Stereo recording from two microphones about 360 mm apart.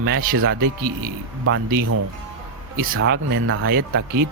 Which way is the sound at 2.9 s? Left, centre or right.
Right.